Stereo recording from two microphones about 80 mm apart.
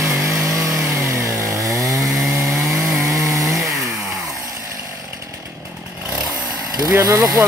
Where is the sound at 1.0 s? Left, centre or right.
Right.